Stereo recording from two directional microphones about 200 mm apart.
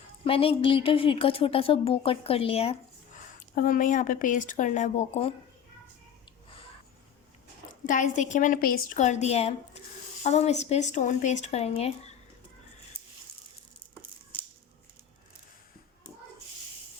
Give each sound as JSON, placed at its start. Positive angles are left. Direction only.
{"t": 0.3, "sound": "speech", "side_deg": 30}
{"t": 3.5, "sound": "a woman's voice", "side_deg": 45}
{"t": 7.7, "sound": "a woman's voice", "side_deg": 40}